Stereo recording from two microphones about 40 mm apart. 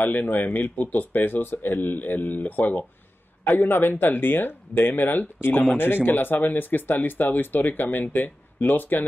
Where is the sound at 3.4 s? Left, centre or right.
Left.